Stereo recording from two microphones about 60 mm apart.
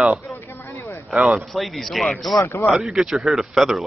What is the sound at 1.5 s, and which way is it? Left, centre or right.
Speech, centre.